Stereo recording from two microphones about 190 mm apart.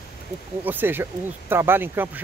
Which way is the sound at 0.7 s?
10° right (ahead or behind).